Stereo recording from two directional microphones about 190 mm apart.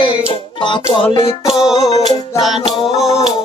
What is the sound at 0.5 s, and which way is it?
Music, 25° left (ahead or behind).